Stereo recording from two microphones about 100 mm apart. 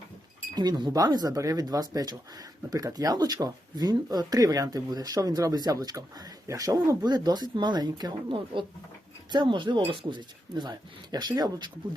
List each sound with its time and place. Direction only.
0.5 s speech: 45° right (ahead or behind)
8.5 s speech: 60° right (ahead or behind); by 11.7 s 45° right (ahead or behind)